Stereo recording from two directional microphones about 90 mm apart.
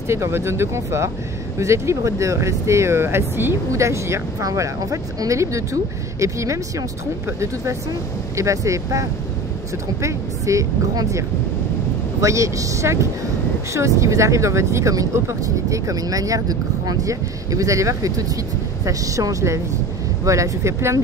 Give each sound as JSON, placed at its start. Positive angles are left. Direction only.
{"t": 0.1, "sound": "speech", "side_deg": -30}
{"t": 10.0, "sound": "speech", "side_deg": -35}